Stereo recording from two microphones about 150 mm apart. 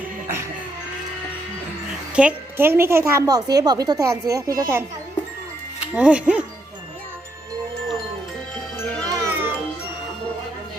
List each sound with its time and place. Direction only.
2.1 s a woman's voice: 10° right (ahead or behind)
5.9 s speech: 5° right (ahead or behind)
8.8 s music: 10° left (ahead or behind)
9.0 s music: 20° right (ahead or behind)